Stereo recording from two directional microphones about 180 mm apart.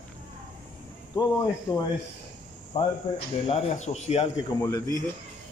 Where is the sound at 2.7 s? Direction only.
35° left (ahead or behind).